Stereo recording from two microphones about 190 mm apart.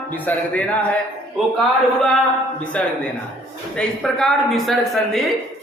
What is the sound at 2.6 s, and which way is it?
A man's voice, 5° left (ahead or behind).